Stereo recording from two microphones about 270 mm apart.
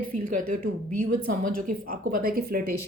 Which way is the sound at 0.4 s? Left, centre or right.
Right.